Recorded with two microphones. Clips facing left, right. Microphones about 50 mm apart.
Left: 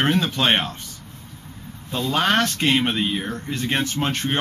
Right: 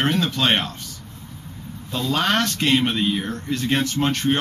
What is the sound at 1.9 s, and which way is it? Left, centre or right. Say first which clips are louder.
Speech: left 1 dB; centre.